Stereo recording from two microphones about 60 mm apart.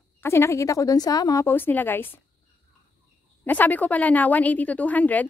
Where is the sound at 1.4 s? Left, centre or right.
Left.